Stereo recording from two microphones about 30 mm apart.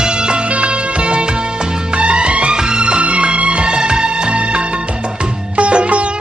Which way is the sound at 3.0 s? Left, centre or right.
Right.